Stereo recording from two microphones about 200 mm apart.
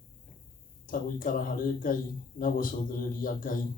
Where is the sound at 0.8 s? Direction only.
45° left (ahead or behind).